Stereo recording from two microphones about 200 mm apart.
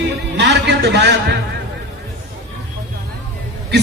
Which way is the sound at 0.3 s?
60° right (ahead or behind).